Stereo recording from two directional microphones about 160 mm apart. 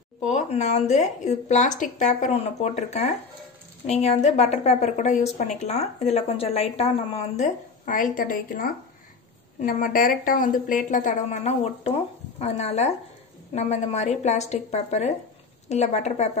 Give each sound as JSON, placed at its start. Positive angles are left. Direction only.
{"t": 0.2, "sound": "a woman's voice", "side_deg": 50}